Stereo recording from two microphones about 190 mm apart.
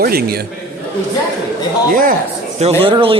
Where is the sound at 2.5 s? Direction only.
30° right (ahead or behind).